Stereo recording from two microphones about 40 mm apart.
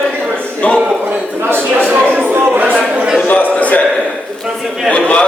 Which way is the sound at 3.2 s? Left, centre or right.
Left.